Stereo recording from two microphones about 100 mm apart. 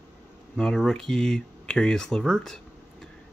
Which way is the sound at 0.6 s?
5° left (ahead or behind).